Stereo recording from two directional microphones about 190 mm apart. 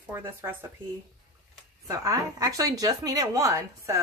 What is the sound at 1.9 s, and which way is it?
Speech, 15° right (ahead or behind).